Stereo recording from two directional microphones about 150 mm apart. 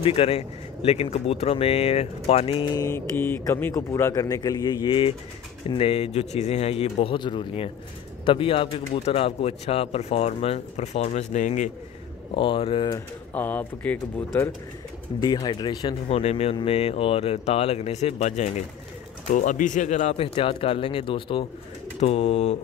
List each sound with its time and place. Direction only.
0.0 s a man's voice: 40° left (ahead or behind)
12.4 s speech: 35° left (ahead or behind)
13.3 s speech: 10° left (ahead or behind)
15.1 s a man's voice: 30° left (ahead or behind)
16.1 s speech: 45° left (ahead or behind)
20.2 s speech: 35° left (ahead or behind)
22.0 s speech: 45° left (ahead or behind)